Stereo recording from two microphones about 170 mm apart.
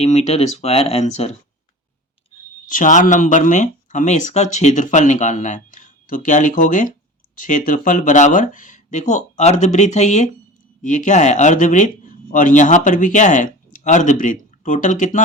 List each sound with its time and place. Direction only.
0.0 s speech: 40° left (ahead or behind)
2.6 s speech: 50° left (ahead or behind)